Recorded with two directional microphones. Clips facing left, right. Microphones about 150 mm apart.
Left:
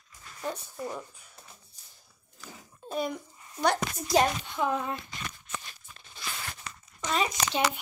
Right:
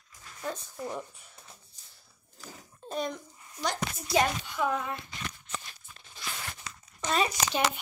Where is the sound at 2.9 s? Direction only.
5° left (ahead or behind).